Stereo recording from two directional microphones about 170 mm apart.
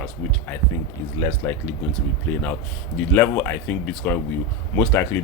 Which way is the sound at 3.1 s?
10° left (ahead or behind).